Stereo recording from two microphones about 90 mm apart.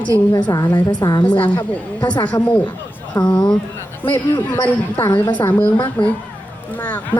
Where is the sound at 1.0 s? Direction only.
45° left (ahead or behind).